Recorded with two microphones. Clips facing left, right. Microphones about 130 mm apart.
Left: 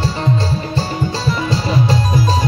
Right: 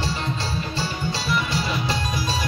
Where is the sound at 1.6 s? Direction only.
35° left (ahead or behind).